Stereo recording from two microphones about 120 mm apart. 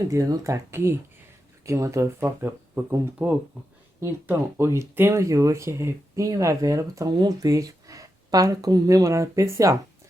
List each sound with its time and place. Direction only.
0.1 s speech: 25° right (ahead or behind)